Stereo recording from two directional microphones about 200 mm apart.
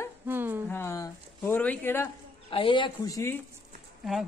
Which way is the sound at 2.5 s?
25° left (ahead or behind).